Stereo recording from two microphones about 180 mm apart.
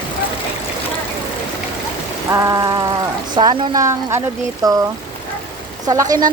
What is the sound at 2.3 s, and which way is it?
Rain, 15° right (ahead or behind).